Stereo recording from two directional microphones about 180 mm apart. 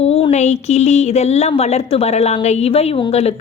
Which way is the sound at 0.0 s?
35° left (ahead or behind).